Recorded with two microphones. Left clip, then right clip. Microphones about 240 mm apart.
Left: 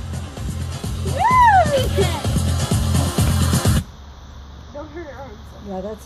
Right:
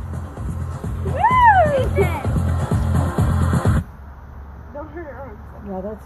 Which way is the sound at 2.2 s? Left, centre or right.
Left.